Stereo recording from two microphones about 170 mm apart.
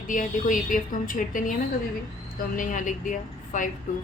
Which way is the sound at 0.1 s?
50° left (ahead or behind).